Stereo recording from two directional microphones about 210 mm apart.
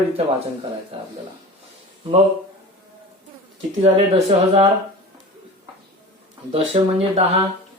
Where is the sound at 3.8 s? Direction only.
30° right (ahead or behind).